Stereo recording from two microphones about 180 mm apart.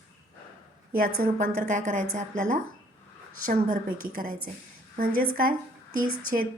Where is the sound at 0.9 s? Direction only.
50° right (ahead or behind).